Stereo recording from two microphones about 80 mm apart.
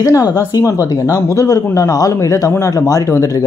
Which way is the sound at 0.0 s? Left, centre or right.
Left.